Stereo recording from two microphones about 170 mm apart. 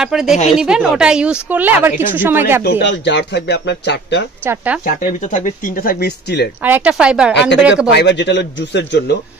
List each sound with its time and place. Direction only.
0.0 s speech: centre (ahead or behind)
2.6 s speech: 90° left
4.8 s speech: 45° left (ahead or behind); by 6.5 s 75° left (ahead or behind)
6.6 s speech: 10° right (ahead or behind)
7.9 s speech: 85° left